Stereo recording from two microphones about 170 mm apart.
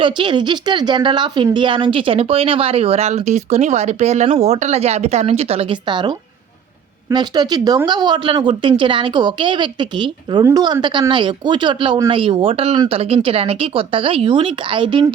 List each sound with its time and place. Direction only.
0.0 s a woman's voice: 30° right (ahead or behind)